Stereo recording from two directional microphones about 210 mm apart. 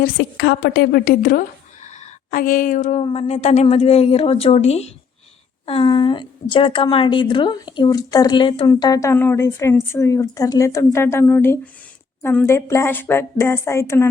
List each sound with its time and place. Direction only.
0.0 s a woman's voice: 55° left (ahead or behind); by 14.1 s 10° left (ahead or behind)